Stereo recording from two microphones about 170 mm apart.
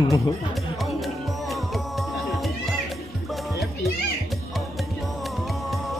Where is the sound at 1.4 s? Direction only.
Centre (ahead or behind).